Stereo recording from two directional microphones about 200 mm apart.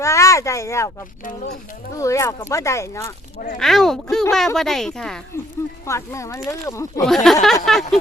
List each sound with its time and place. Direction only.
0.0 s speech: 15° left (ahead or behind)
1.3 s speech: 40° left (ahead or behind)
1.9 s speech: 15° left (ahead or behind)
3.6 s speech: centre (ahead or behind)
5.9 s speech: 15° left (ahead or behind)
7.0 s speech: centre (ahead or behind)